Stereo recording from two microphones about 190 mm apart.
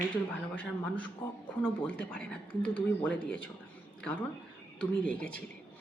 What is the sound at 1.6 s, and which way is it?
Speech, 5° left (ahead or behind).